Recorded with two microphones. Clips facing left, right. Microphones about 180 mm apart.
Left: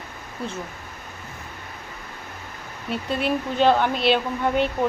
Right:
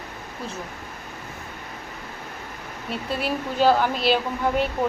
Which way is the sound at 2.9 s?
5° right (ahead or behind).